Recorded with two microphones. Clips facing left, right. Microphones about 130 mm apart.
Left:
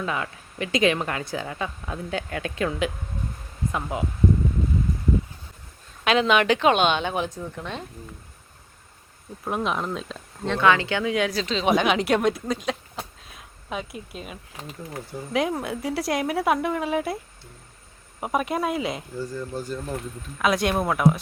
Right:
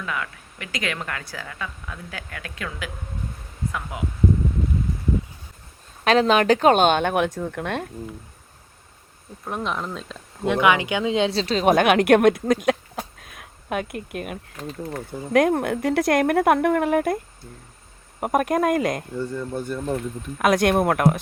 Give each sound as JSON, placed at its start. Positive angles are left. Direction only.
{"t": 0.0, "sound": "a woman's voice", "side_deg": 25}
{"t": 6.1, "sound": "speech", "side_deg": -40}
{"t": 9.4, "sound": "speech", "side_deg": 5}
{"t": 10.4, "sound": "speech", "side_deg": -15}
{"t": 11.5, "sound": "speech", "side_deg": -50}
{"t": 18.2, "sound": "speech", "side_deg": -50}
{"t": 19.2, "sound": "speech", "side_deg": -60}